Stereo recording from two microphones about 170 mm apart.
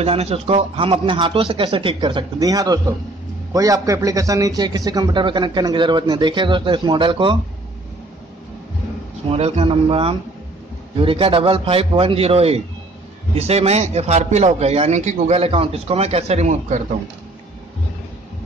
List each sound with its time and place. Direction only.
0.0 s a man's voice: 35° right (ahead or behind)
9.3 s a man's voice: 35° right (ahead or behind)